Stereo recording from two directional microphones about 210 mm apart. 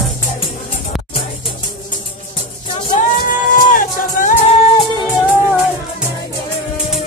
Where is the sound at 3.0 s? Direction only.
40° left (ahead or behind).